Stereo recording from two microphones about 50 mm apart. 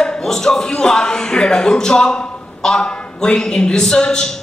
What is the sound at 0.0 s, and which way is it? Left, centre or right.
A man's voice, centre.